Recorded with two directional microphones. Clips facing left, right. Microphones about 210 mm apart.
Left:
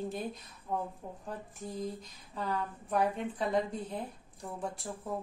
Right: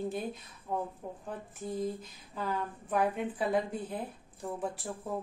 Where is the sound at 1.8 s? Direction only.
5° right (ahead or behind).